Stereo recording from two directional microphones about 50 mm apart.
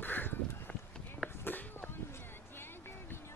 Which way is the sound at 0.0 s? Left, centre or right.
Left.